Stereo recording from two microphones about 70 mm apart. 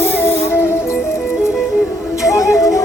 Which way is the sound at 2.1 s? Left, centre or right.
Left.